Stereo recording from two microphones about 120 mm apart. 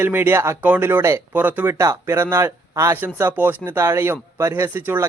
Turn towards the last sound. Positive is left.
turn(degrees=-20)  # may be behind; listen again after turning